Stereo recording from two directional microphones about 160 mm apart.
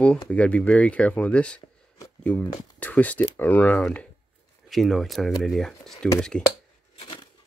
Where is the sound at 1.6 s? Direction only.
30° left (ahead or behind).